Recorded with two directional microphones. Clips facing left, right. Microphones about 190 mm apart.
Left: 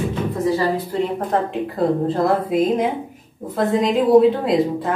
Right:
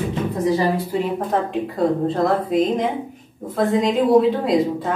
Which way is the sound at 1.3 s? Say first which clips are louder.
Left 1 dB; centre (ahead or behind).